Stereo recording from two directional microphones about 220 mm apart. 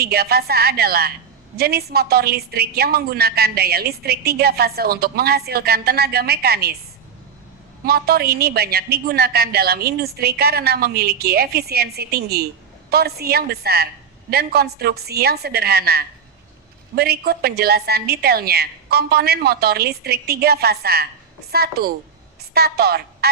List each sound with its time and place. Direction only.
0.0 s a woman's voice: 45° right (ahead or behind)
7.9 s a woman's voice: 45° right (ahead or behind)